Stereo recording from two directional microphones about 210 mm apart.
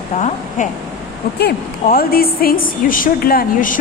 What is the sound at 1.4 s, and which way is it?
A woman's voice, 50° left (ahead or behind).